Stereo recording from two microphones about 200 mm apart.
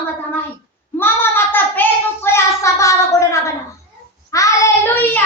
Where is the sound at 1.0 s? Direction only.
10° left (ahead or behind).